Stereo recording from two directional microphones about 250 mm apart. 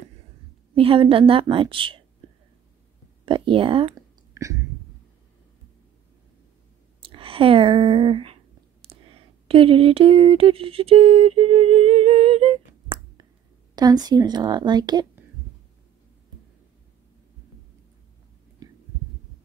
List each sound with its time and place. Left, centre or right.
0.7 s a woman's voice: right
3.3 s speech: right
7.0 s a woman's voice: right
18.6 s heart sounds: centre